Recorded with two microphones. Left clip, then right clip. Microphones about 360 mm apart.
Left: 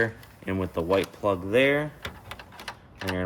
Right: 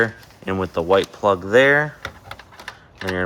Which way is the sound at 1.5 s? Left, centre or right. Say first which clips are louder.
Right 8 dB; right.